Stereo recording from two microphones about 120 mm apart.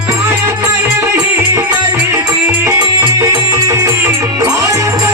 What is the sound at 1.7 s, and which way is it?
Music, 25° right (ahead or behind).